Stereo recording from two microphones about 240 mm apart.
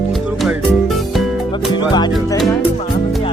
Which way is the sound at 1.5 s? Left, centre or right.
Centre.